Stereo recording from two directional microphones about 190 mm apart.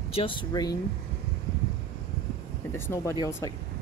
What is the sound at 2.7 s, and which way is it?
Speech, 15° left (ahead or behind).